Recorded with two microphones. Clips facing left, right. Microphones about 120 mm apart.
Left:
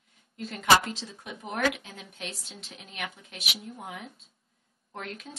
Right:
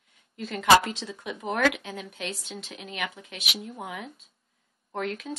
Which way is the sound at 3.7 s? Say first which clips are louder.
Right 4 dB; 90° right.